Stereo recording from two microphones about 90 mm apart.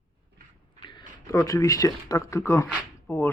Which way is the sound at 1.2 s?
40° left (ahead or behind).